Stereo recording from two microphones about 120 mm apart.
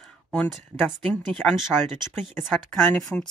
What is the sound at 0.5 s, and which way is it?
Speech, 5° right (ahead or behind).